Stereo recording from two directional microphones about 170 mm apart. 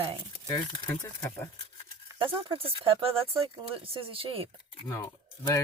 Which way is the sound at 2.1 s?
30° right (ahead or behind).